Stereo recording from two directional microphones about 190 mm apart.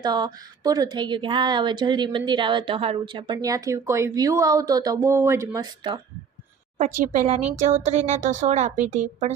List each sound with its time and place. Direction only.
0.0 s a woman's voice: 20° right (ahead or behind)
6.7 s a woman's voice: 40° right (ahead or behind)